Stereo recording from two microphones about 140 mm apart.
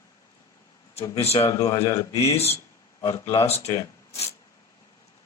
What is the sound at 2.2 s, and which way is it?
A man's voice, 45° left (ahead or behind).